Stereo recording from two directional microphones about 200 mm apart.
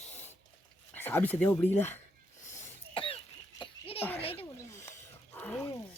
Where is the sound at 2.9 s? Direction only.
25° left (ahead or behind).